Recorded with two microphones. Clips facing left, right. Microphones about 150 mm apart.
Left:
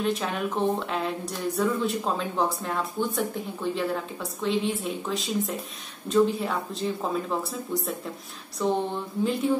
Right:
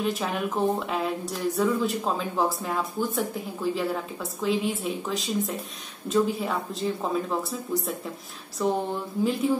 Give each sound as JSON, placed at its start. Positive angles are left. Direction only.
{"t": 0.0, "sound": "speech", "side_deg": 0}